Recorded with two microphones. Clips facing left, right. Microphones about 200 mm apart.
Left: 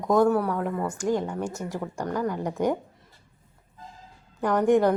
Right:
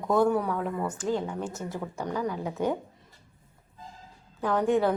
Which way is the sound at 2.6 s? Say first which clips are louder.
Left 3 dB; 15° left (ahead or behind).